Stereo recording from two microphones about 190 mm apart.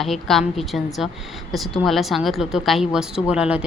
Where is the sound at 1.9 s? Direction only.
Centre (ahead or behind).